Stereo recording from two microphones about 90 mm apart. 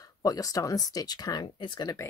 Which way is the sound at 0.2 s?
45° left (ahead or behind).